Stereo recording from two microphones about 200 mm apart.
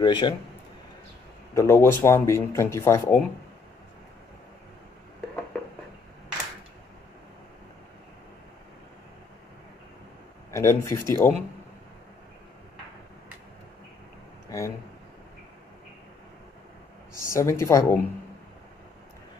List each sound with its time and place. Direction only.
0.0 s a man's voice: 20° left (ahead or behind)
1.5 s speech: 15° left (ahead or behind)
10.5 s speech: 15° left (ahead or behind)
17.3 s speech: 15° left (ahead or behind)